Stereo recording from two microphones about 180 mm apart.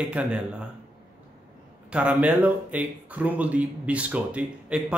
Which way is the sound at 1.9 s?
5° right (ahead or behind).